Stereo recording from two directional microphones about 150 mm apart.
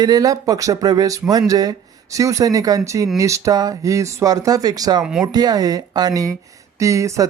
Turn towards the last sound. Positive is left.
turn(degrees=-20)  # may be behind; listen again after turning